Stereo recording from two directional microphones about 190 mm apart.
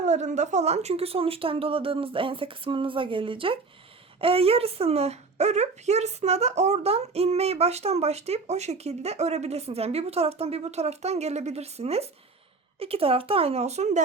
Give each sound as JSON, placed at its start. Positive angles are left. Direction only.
{"t": 0.0, "sound": "speech", "side_deg": -40}